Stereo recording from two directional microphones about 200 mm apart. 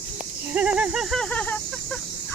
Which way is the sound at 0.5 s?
5° right (ahead or behind).